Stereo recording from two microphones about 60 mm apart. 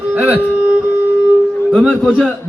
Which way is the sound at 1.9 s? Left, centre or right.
Centre.